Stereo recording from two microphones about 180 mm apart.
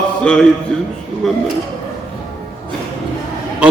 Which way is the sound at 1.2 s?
Centre (ahead or behind).